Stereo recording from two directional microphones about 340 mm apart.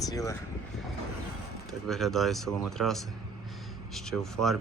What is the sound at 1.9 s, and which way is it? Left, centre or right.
Speech, centre.